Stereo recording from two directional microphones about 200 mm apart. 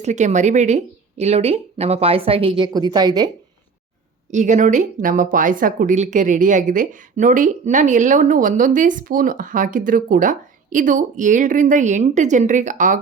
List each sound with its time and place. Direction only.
0.0 s a woman's voice: 35° right (ahead or behind); by 3.2 s 20° right (ahead or behind)
4.3 s speech: 35° right (ahead or behind)